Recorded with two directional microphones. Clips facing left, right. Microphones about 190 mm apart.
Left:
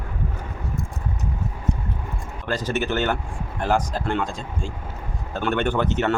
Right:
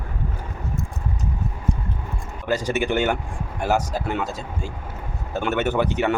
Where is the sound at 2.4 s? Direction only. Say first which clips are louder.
Right 2 dB; 10° right (ahead or behind).